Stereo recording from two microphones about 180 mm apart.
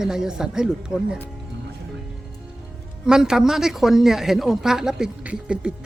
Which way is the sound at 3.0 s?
5° right (ahead or behind).